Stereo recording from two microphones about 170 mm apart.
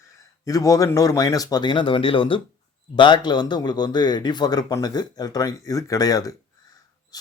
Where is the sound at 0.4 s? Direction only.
20° left (ahead or behind).